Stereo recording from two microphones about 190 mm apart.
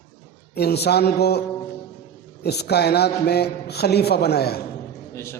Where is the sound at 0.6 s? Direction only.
60° left (ahead or behind).